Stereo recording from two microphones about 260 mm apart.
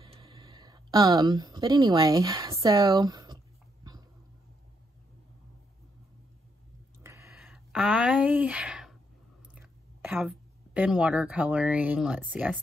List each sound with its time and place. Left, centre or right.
0.0 s speech: centre
7.0 s a sound: centre
9.6 s a woman's voice: centre